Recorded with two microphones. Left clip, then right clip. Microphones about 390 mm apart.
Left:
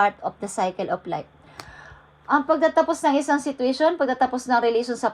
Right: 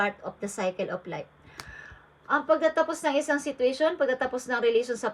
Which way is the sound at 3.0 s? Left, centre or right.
Centre.